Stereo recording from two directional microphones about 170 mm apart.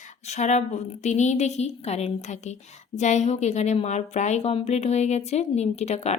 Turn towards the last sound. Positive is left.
turn(degrees=40)  # may be behind; listen again after turning